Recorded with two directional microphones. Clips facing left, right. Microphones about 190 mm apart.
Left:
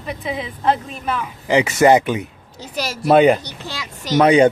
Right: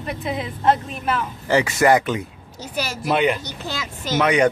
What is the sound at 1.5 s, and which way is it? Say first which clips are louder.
Speech: left 3 dB; 20° left (ahead or behind).